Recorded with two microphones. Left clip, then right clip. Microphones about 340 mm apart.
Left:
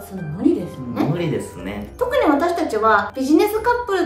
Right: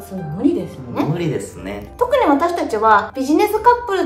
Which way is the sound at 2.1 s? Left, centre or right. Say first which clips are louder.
Right 2 dB; centre.